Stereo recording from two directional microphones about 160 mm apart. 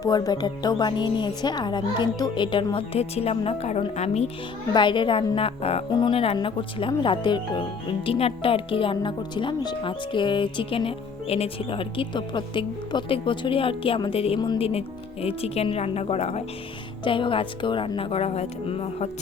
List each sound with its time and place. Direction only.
0.0 s a woman's voice: 25° left (ahead or behind); by 4.3 s 45° left (ahead or behind)
4.7 s a woman's voice: 30° left (ahead or behind)